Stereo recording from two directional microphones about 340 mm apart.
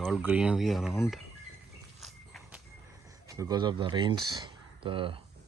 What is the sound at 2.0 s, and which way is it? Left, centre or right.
Walk, centre.